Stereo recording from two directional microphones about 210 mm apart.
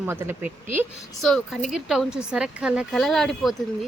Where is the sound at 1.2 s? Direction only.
Centre (ahead or behind).